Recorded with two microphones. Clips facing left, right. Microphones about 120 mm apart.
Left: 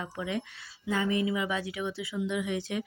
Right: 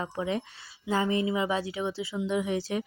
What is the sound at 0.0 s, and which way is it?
Speech, 35° right (ahead or behind).